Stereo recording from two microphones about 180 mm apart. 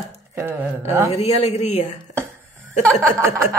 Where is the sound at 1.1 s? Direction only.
40° left (ahead or behind).